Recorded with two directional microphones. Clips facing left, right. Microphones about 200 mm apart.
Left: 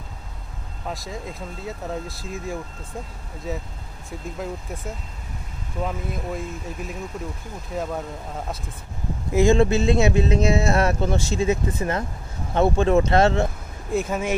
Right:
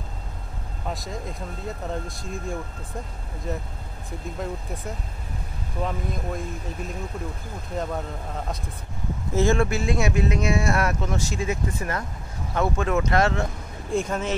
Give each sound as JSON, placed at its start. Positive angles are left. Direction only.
{"t": 0.8, "sound": "speech", "side_deg": 0}
{"t": 5.9, "sound": "speech", "side_deg": 5}
{"t": 9.3, "sound": "speech", "side_deg": 15}
{"t": 13.8, "sound": "speech", "side_deg": 5}